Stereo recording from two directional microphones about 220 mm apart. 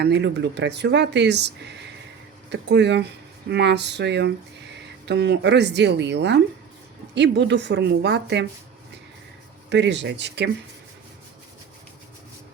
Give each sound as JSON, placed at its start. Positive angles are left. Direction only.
{"t": 0.0, "sound": "speech", "side_deg": -50}
{"t": 9.6, "sound": "speech", "side_deg": -55}